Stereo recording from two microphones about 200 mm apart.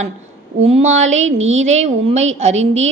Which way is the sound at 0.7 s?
35° right (ahead or behind).